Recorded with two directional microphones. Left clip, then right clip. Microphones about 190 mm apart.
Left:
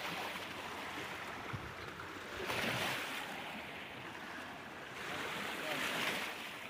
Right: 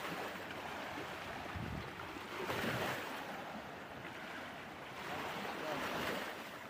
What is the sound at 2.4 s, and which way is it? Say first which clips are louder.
Waves: left 2 dB; 40° right (ahead or behind).